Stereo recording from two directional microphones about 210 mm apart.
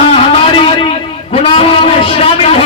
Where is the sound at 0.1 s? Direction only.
25° left (ahead or behind).